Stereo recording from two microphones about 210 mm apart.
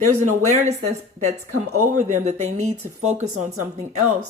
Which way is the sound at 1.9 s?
35° right (ahead or behind).